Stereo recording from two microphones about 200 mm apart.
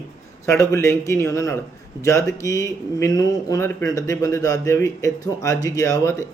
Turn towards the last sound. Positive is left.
turn(degrees=15)  # may be behind; listen again after turning